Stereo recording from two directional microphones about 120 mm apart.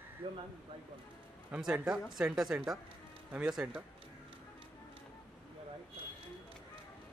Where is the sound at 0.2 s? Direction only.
50° right (ahead or behind).